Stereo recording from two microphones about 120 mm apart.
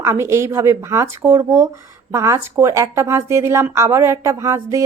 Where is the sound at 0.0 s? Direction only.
25° right (ahead or behind).